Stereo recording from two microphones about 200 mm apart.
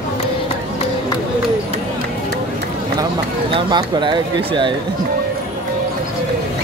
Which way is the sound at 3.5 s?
25° right (ahead or behind).